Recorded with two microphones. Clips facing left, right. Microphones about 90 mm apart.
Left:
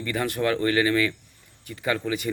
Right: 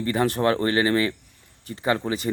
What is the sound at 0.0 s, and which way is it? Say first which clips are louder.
Speech: right 4 dB; 30° right (ahead or behind).